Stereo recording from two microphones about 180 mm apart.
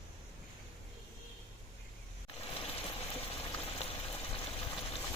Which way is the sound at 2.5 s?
30° left (ahead or behind).